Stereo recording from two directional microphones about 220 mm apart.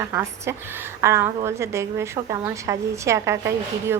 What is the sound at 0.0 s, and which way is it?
A woman's voice, 15° right (ahead or behind).